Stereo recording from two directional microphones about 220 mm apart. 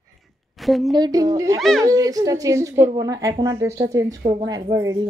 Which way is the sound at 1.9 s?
15° right (ahead or behind).